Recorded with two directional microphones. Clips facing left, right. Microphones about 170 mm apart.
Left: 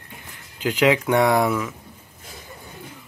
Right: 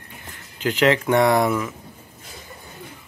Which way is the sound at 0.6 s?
10° left (ahead or behind).